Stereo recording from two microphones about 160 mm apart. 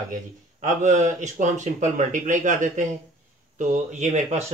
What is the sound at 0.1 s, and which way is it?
Speech, 50° right (ahead or behind).